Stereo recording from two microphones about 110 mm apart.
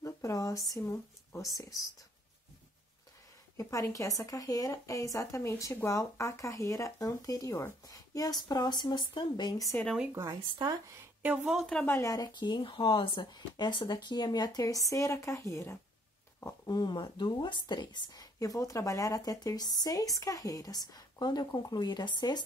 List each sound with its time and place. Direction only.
0.0 s speech: 30° left (ahead or behind)
3.5 s a woman's voice: 30° left (ahead or behind)
10.1 s speech: 30° right (ahead or behind)
11.2 s speech: 5° right (ahead or behind)
11.6 s speech: 10° left (ahead or behind)
11.9 s a woman's voice: 30° left (ahead or behind)